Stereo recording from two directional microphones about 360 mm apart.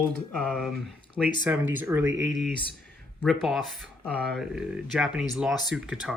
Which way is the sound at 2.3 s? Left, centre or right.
Centre.